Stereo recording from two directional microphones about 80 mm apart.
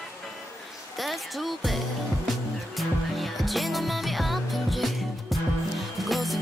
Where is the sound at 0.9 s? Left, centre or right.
Centre.